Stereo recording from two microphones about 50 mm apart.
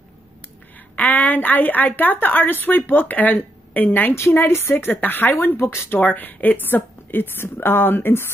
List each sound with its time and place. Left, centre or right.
0.9 s a woman's voice: left
4.3 s a woman's voice: left
4.7 s a woman's voice: left
5.6 s speech: left
5.9 s a woman's voice: left